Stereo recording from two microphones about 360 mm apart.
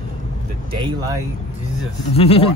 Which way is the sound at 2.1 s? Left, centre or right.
Centre.